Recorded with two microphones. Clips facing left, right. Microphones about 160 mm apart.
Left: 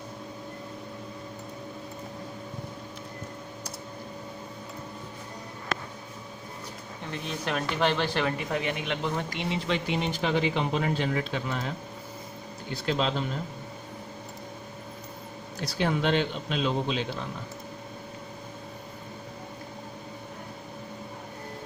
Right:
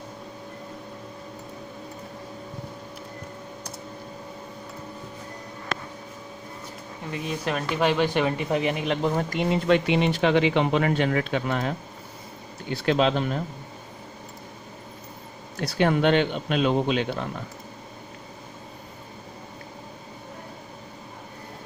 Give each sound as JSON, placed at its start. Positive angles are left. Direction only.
{"t": 7.0, "sound": "speech", "side_deg": -5}
{"t": 8.1, "sound": "speech", "side_deg": -20}
{"t": 12.7, "sound": "speech", "side_deg": -65}
{"t": 15.6, "sound": "speech", "side_deg": -60}